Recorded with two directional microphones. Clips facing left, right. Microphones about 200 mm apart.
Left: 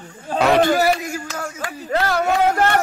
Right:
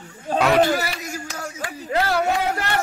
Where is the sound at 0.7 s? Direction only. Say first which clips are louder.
Left 7 dB; 50° left (ahead or behind).